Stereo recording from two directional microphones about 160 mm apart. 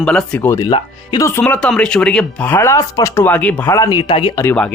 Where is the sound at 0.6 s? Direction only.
25° left (ahead or behind).